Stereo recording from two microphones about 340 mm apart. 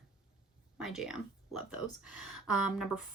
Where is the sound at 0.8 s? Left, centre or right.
Centre.